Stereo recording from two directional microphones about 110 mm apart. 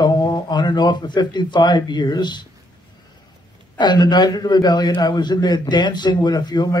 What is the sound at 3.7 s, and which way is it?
A man's voice, 40° left (ahead or behind).